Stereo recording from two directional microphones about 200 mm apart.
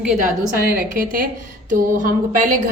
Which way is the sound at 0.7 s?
45° right (ahead or behind).